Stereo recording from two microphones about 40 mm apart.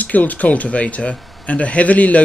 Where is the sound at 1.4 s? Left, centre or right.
Left.